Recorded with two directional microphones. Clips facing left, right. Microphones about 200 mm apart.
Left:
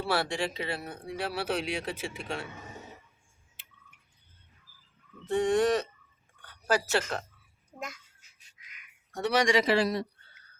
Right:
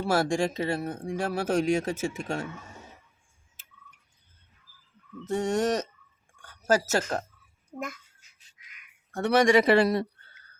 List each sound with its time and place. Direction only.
0.0 s speech: 45° right (ahead or behind)
5.2 s speech: 45° right (ahead or behind)
9.1 s a man's voice: 55° right (ahead or behind)